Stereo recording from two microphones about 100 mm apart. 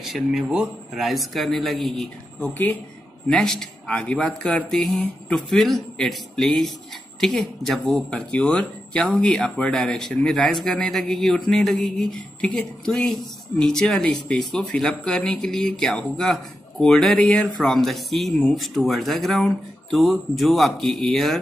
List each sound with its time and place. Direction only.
0.0 s speech: centre (ahead or behind)
2.4 s speech: 20° left (ahead or behind)
3.3 s a man's voice: 5° left (ahead or behind)